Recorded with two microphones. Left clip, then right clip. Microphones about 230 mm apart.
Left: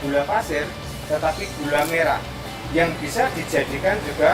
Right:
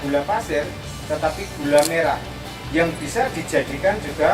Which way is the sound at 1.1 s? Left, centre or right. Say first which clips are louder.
Even; centre.